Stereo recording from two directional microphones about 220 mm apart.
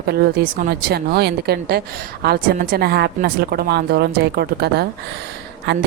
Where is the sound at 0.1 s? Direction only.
45° right (ahead or behind).